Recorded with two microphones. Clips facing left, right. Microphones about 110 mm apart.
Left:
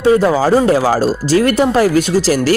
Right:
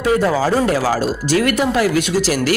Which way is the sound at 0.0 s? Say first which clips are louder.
Left 4 dB; 30° left (ahead or behind).